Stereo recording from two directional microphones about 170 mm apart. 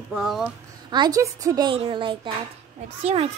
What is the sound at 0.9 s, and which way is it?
A woman's voice, 25° right (ahead or behind).